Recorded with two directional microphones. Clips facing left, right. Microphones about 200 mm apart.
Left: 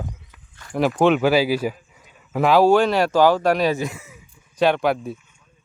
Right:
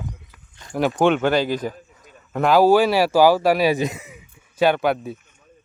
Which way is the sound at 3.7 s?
20° right (ahead or behind).